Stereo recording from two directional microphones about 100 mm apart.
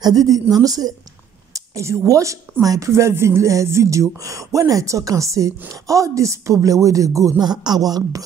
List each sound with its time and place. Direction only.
0.0 s speech: 40° right (ahead or behind)